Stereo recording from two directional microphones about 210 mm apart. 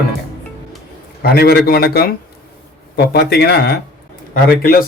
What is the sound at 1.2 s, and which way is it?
A man's voice, 50° left (ahead or behind).